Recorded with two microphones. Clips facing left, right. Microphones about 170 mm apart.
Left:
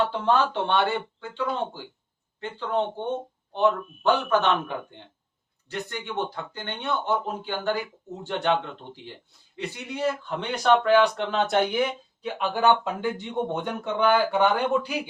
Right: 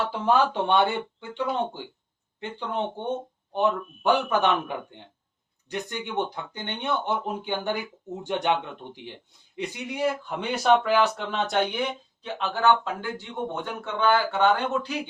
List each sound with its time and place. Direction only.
0.1 s speech: 10° right (ahead or behind)
5.6 s speech: 15° right (ahead or behind); by 14.9 s 10° left (ahead or behind)